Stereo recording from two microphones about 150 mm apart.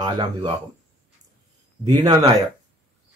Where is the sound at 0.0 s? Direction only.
30° right (ahead or behind).